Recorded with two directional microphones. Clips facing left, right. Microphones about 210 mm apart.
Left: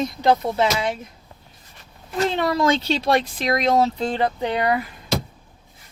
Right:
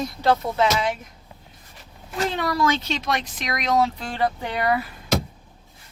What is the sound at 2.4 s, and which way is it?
Speech, 25° left (ahead or behind).